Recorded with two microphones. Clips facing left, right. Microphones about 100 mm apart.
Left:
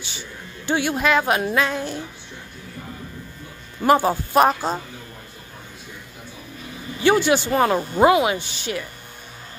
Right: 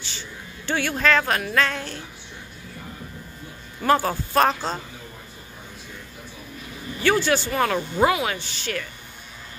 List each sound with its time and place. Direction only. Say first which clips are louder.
0.7 s speech: left 2 dB; 15° left (ahead or behind)
3.8 s speech: left 3 dB; 15° left (ahead or behind)
7.0 s speech: left 3 dB; 15° left (ahead or behind)